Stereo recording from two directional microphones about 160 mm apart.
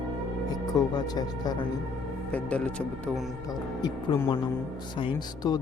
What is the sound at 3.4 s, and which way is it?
Speech, 25° left (ahead or behind).